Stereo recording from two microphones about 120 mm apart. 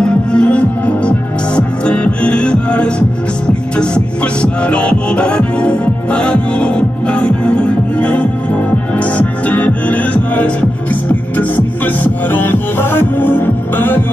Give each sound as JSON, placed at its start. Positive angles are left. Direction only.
{"t": 0.0, "sound": "music", "side_deg": 10}